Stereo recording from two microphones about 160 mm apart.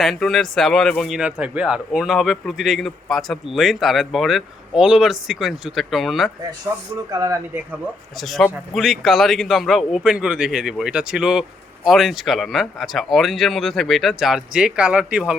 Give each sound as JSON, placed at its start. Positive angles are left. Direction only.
{"t": 0.0, "sound": "a man's voice", "side_deg": 0}
{"t": 7.1, "sound": "speech", "side_deg": -20}
{"t": 8.2, "sound": "a man's voice", "side_deg": 0}